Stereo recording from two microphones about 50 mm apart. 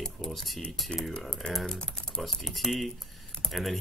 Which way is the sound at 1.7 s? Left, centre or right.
Centre.